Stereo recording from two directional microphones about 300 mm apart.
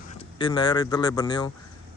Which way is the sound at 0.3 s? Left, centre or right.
Centre.